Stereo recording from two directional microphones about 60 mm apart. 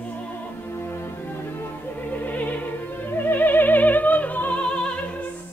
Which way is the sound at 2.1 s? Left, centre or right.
Left.